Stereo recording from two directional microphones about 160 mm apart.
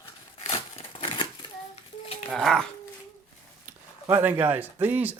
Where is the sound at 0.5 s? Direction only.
35° left (ahead or behind).